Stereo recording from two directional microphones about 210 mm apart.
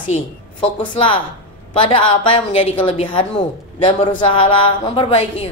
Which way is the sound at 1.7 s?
25° left (ahead or behind).